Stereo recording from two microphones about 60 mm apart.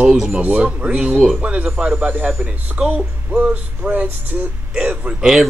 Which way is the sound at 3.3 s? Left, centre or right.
Right.